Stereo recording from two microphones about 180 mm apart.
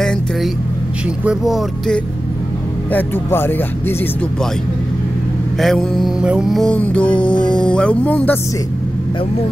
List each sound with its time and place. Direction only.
1.2 s music: centre (ahead or behind)
2.9 s speech: 10° left (ahead or behind)
5.6 s music: centre (ahead or behind)
7.2 s speech: 25° left (ahead or behind)
7.6 s speech: 5° left (ahead or behind)